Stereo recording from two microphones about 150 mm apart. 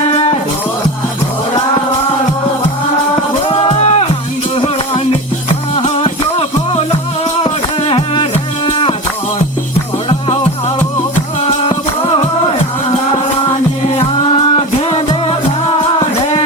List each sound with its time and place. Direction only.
3.5 s music: 45° left (ahead or behind)
5.7 s music: 40° left (ahead or behind)
7.4 s music: 35° left (ahead or behind)